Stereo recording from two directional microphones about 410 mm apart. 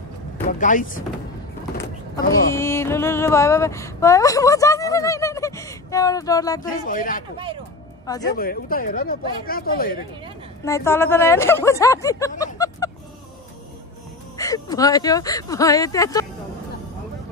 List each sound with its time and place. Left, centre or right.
0.5 s speech: centre
2.1 s speech: centre
6.6 s speech: centre
8.4 s speech: left
10.6 s speech: centre
14.3 s speech: centre